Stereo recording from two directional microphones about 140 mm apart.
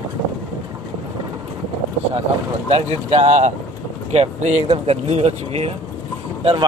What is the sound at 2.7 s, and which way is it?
Speech, 50° right (ahead or behind).